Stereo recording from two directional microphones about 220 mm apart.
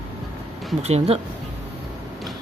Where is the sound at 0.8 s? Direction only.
30° right (ahead or behind).